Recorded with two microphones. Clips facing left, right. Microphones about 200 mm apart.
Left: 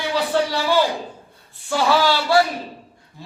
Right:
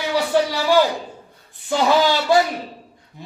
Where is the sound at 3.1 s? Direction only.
20° right (ahead or behind).